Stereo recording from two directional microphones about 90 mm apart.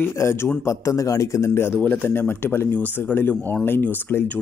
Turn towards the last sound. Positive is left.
turn(degrees=25)  # may be behind; listen again after turning